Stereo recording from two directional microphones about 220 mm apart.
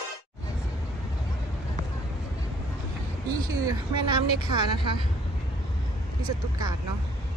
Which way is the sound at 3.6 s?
20° right (ahead or behind).